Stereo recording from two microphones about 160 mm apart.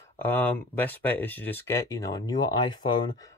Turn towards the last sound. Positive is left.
turn(degrees=30)  # may be behind; listen again after turning